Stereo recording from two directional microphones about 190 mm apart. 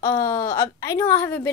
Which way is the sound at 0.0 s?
15° left (ahead or behind).